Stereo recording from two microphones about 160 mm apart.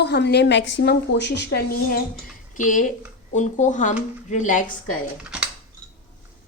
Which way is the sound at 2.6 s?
55° left (ahead or behind).